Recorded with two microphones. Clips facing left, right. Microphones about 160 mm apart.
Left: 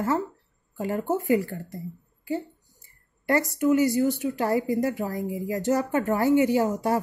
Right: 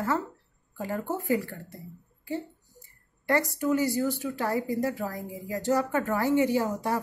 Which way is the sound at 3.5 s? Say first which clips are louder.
Left 5 dB; 20° left (ahead or behind).